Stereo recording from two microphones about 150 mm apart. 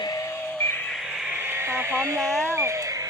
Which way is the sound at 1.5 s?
15° right (ahead or behind).